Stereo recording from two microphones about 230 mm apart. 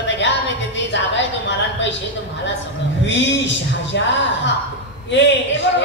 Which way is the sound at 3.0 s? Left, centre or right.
Left.